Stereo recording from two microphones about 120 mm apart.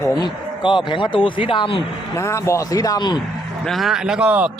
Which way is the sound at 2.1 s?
25° left (ahead or behind).